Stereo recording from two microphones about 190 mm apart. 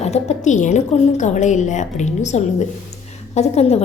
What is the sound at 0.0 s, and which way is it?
A woman's voice, 35° left (ahead or behind).